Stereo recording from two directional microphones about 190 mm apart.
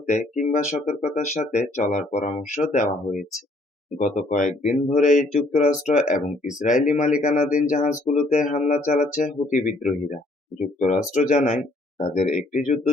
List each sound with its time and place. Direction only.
0.1 s speech: 40° left (ahead or behind)